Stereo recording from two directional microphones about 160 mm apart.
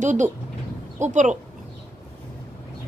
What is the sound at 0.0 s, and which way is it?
Speech, 50° right (ahead or behind).